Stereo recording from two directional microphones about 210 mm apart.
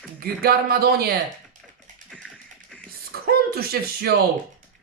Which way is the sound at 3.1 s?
45° right (ahead or behind).